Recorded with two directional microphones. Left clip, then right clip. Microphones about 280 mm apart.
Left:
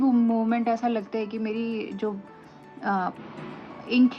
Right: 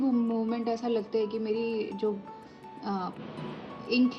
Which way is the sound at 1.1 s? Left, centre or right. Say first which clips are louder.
Right 1 dB; centre.